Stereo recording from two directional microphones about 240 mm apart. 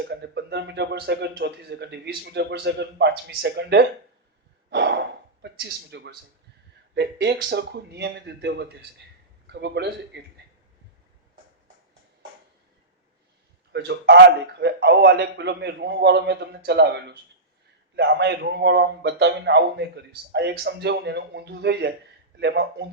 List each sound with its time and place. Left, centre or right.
0.0 s a man's voice: right
13.7 s a man's voice: right